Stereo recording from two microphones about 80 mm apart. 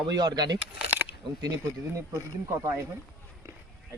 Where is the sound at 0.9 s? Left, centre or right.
Right.